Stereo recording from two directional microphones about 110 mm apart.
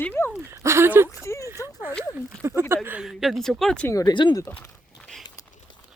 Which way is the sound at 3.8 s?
30° left (ahead or behind).